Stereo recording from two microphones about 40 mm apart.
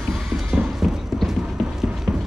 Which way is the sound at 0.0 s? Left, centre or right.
Centre.